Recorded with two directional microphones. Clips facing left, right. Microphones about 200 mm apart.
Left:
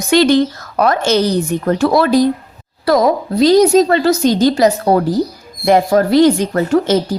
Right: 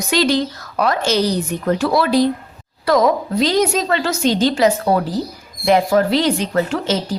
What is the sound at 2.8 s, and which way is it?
A woman's voice, 35° left (ahead or behind).